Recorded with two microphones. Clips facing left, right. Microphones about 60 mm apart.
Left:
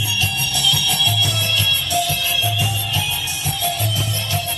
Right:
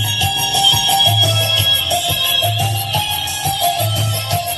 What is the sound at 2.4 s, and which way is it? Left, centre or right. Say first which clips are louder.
Music: right 3 dB; right.